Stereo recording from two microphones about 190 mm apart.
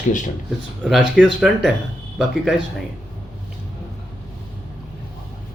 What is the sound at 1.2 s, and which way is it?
Speech, centre (ahead or behind).